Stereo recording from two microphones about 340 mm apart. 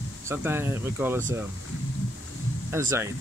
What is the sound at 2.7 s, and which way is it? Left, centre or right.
Speech, centre.